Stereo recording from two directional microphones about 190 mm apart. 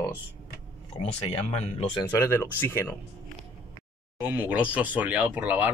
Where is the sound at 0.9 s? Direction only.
35° left (ahead or behind).